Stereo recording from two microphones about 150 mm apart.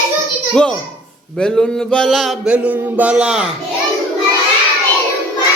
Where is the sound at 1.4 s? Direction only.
5° left (ahead or behind).